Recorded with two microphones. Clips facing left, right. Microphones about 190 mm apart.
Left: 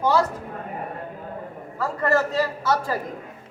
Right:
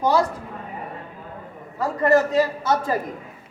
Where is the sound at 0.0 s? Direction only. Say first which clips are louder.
Right 1 dB; 15° right (ahead or behind).